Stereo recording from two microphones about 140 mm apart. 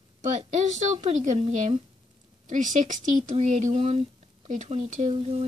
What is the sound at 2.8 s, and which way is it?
A woman's voice, 60° right (ahead or behind).